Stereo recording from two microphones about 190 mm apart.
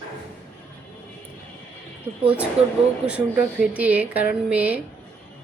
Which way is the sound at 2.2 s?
5° right (ahead or behind).